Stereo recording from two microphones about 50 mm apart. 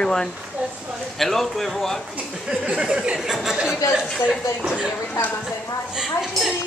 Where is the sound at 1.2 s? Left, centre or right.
Centre.